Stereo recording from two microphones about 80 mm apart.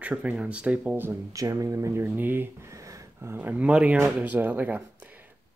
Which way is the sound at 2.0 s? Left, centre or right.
Right.